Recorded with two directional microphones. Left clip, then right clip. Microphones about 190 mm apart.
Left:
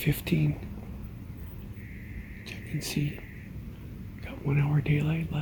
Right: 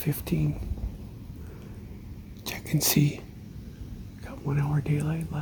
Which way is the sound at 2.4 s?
40° right (ahead or behind).